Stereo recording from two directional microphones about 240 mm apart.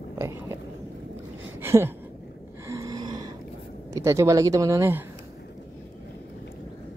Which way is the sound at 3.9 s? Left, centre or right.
Centre.